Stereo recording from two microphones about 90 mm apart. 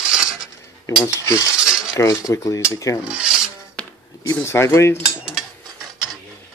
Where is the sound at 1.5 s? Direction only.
5° right (ahead or behind).